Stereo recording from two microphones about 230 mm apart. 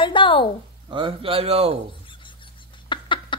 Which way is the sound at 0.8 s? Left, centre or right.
Right.